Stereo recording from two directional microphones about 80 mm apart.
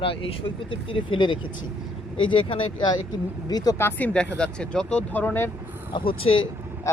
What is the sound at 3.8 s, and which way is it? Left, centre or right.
Speech, left.